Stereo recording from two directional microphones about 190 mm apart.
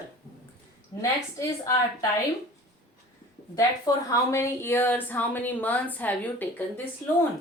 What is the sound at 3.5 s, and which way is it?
A woman's voice, 15° left (ahead or behind).